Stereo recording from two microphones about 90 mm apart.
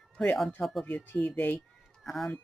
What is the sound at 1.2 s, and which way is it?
Speech, 15° left (ahead or behind).